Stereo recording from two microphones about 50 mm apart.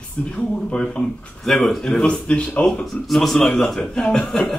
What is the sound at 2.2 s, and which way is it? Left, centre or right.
Speech, left.